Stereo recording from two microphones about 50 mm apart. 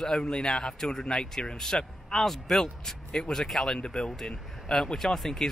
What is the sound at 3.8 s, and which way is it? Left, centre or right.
Speech, centre.